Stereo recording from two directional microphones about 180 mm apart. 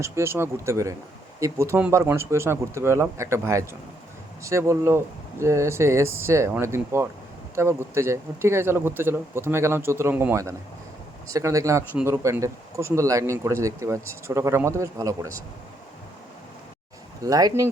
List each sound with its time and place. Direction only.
0.0 s speech: 15° right (ahead or behind)
17.2 s speech: 20° right (ahead or behind)